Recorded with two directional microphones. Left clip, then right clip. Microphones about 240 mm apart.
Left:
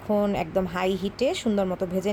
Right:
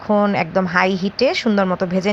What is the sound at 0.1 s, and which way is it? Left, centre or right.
A woman's voice, centre.